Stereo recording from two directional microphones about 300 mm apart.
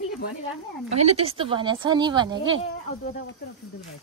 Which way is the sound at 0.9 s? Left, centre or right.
Right.